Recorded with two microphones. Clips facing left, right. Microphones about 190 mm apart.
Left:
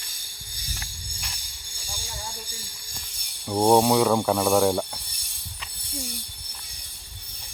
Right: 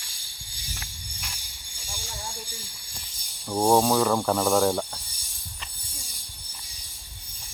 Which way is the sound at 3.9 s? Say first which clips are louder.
Left 2 dB; 5° left (ahead or behind).